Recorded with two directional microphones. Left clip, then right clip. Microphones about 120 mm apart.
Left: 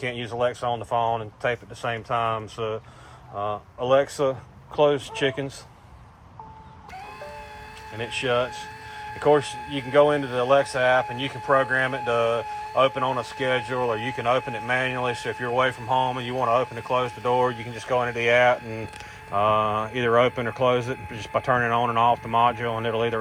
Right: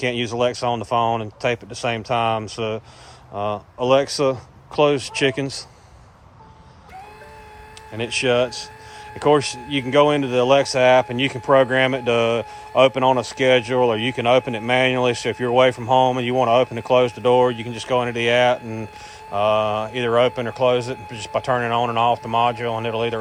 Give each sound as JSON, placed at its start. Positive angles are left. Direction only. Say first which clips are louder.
{"t": 0.3, "sound": "speech", "louder": "right 1 dB", "side_deg": -20}
{"t": 7.9, "sound": "speech", "louder": "right 5 dB", "side_deg": -30}
{"t": 11.5, "sound": "speech", "louder": "right 5 dB", "side_deg": -55}
{"t": 11.9, "sound": "speech", "louder": "right 4 dB", "side_deg": -30}
{"t": 13.7, "sound": "speech", "louder": "right 7 dB", "side_deg": -40}
{"t": 15.9, "sound": "speech", "louder": "right 7 dB", "side_deg": -25}
{"t": 16.4, "sound": "speech", "louder": "right 5 dB", "side_deg": -50}
{"t": 16.9, "sound": "speech", "louder": "right 8 dB", "side_deg": -40}
{"t": 17.3, "sound": "speech", "louder": "right 5 dB", "side_deg": -25}
{"t": 17.7, "sound": "speech", "louder": "right 2 dB", "side_deg": -40}